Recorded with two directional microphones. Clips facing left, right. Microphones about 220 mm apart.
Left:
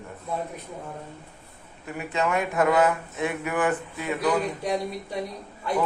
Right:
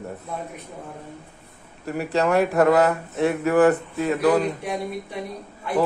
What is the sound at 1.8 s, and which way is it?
A man's voice, 40° right (ahead or behind).